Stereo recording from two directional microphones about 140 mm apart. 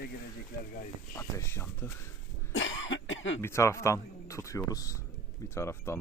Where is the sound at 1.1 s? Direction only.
15° left (ahead or behind).